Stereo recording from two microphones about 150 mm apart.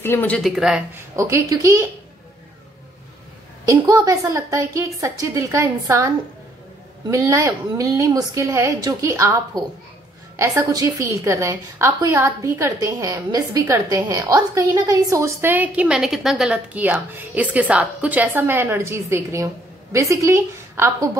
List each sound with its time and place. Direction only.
0.0 s speech: 15° left (ahead or behind)
0.4 s speech: 5° right (ahead or behind)
0.9 s a woman's voice: 20° right (ahead or behind)
3.6 s a woman's voice: 25° right (ahead or behind)